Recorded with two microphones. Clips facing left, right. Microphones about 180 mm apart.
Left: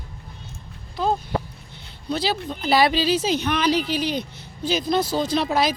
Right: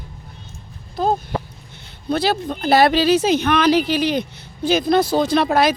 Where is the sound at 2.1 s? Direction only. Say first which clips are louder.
Right 5 dB; 55° right (ahead or behind).